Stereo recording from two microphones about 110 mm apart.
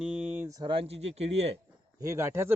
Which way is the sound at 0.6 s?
55° right (ahead or behind).